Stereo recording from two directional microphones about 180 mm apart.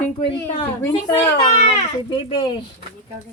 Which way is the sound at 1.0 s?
30° left (ahead or behind).